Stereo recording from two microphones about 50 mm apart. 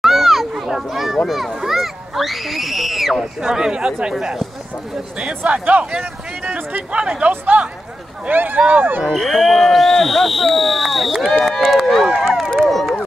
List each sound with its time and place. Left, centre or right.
0.0 s a child's voice: centre
3.4 s speech: centre
5.4 s speech: right
8.3 s speech: right
9.0 s speech: centre
12.1 s run: centre
12.6 s a sound: centre